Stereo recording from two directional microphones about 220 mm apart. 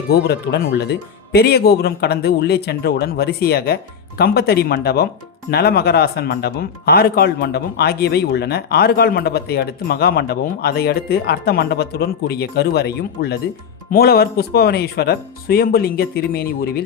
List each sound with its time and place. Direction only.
0.1 s speech: 50° left (ahead or behind)